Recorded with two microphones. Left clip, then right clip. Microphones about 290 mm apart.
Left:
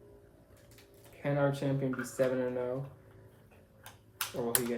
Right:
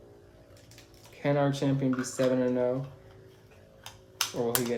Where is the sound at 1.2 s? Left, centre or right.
Right.